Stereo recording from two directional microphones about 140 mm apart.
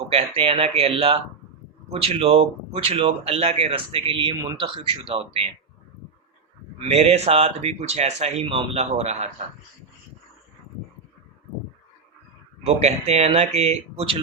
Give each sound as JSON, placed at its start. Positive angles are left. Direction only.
{"t": 0.1, "sound": "speech", "side_deg": -40}
{"t": 4.4, "sound": "speech", "side_deg": -25}
{"t": 4.6, "sound": "speech", "side_deg": -40}
{"t": 6.7, "sound": "speech", "side_deg": -50}
{"t": 12.6, "sound": "speech", "side_deg": -50}